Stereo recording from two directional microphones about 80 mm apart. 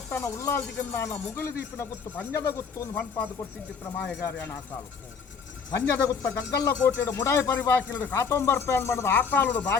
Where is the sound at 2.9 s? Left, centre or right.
Centre.